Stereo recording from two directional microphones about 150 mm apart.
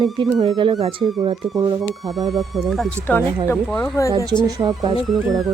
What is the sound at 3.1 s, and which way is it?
Speech, 10° left (ahead or behind).